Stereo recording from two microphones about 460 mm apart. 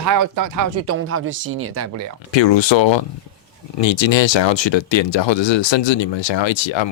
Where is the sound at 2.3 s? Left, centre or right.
Left.